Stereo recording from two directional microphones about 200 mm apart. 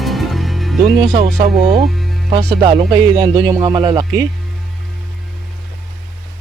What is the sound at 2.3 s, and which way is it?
Speech, 25° right (ahead or behind).